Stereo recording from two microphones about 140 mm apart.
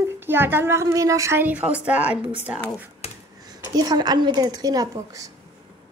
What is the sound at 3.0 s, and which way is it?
Finger snapping, 45° left (ahead or behind).